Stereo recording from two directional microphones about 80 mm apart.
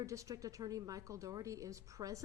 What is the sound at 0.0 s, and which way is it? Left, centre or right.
A woman's voice, right.